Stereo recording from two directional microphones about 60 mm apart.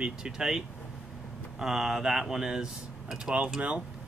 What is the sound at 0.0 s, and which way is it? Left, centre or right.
Speech, centre.